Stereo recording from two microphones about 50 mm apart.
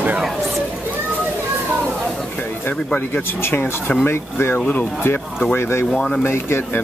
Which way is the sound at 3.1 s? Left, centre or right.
Left.